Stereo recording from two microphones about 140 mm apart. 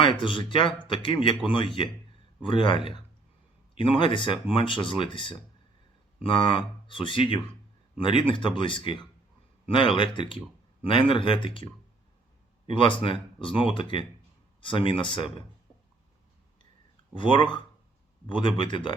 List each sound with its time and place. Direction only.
0.0 s speech: 35° left (ahead or behind)
17.2 s speech: 35° left (ahead or behind)